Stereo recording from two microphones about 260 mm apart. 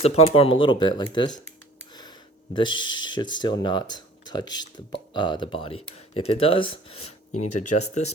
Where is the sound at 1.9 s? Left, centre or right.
Centre.